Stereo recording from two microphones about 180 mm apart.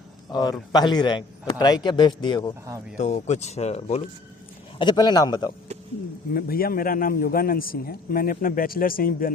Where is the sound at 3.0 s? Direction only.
40° left (ahead or behind).